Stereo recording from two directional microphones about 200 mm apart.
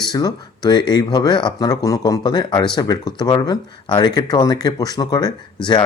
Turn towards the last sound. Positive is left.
turn(degrees=20)  # may be behind; listen again after turning